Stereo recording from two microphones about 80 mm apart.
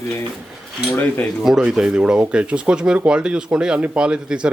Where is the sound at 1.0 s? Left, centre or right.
Left.